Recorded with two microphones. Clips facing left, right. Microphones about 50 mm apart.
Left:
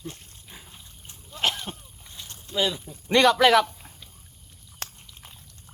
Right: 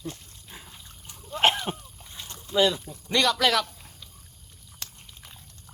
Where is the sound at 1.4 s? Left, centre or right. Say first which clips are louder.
Right 5 dB; right.